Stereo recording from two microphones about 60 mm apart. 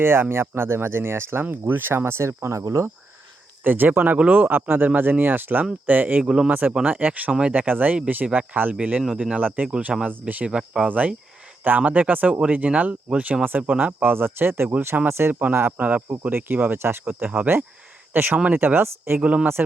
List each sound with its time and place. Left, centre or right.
0.0 s speech: right
3.6 s speech: right
6.2 s speech: centre
6.5 s speech: right
8.8 s speech: centre
10.5 s speech: centre
10.8 s speech: right
15.3 s speech: right
19.2 s speech: right